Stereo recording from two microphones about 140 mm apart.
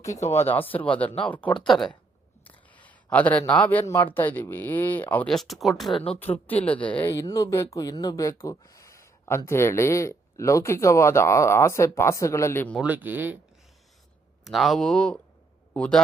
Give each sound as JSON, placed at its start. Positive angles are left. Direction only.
{"t": 0.3, "sound": "speech", "side_deg": 15}
{"t": 5.9, "sound": "speech", "side_deg": 45}
{"t": 6.5, "sound": "speech", "side_deg": 10}
{"t": 12.8, "sound": "speech", "side_deg": -10}
{"t": 14.4, "sound": "a man's voice", "side_deg": 0}